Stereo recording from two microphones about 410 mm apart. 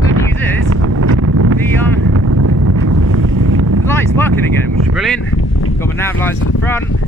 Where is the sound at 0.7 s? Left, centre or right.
Right.